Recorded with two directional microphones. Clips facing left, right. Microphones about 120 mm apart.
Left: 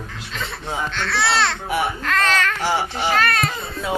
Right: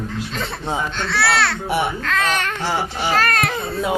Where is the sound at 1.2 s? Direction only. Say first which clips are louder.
Right 1 dB; 5° right (ahead or behind).